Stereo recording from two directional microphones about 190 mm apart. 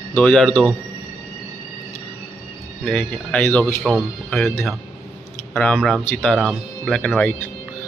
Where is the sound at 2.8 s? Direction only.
5° left (ahead or behind).